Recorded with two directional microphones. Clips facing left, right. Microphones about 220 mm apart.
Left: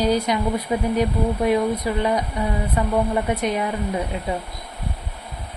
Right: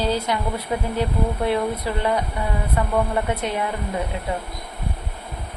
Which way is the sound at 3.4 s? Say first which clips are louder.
Left 3 dB; 15° left (ahead or behind).